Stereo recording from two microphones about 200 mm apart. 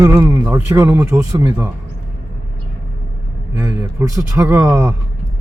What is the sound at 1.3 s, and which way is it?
Speech, 20° right (ahead or behind).